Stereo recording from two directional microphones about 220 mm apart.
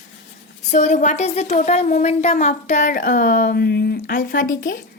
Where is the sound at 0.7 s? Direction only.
35° left (ahead or behind).